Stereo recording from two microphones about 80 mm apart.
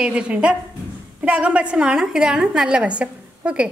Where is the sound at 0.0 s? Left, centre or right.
Centre.